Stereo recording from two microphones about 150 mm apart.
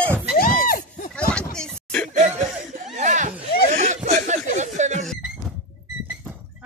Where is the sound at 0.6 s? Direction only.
70° left (ahead or behind).